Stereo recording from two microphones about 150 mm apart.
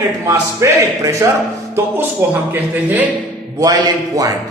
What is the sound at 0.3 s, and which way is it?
A man's voice, 20° right (ahead or behind).